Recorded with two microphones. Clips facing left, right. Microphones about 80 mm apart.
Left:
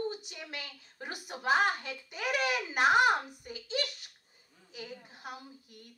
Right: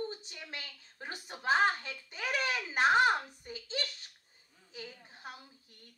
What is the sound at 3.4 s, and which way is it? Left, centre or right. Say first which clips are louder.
Hands: left 4 dB; right.